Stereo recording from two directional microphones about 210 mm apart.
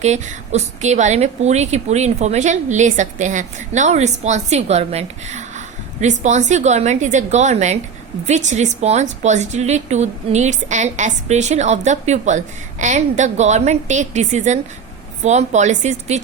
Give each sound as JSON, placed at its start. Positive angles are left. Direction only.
{"t": 0.0, "sound": "a woman's voice", "side_deg": -35}